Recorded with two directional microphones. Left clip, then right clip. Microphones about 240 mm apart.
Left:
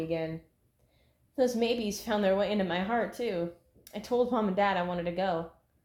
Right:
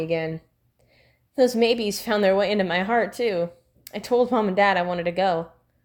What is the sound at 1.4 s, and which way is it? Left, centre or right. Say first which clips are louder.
Speech: right 9 dB; right.